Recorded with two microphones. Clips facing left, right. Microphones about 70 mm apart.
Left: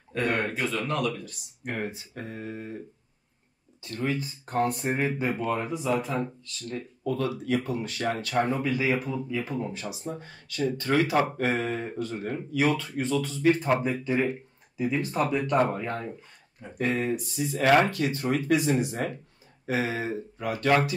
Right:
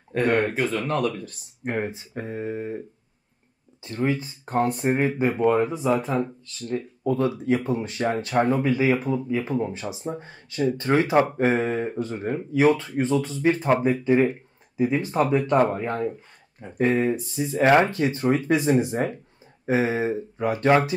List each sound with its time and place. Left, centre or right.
0.1 s speech: right
3.8 s speech: right